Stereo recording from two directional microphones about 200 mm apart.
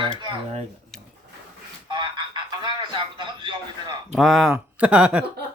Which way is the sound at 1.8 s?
25° right (ahead or behind).